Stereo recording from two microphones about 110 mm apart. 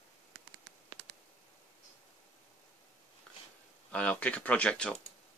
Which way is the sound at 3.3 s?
5° left (ahead or behind).